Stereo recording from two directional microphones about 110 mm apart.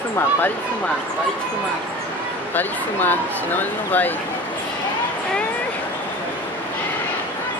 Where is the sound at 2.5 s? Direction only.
15° left (ahead or behind).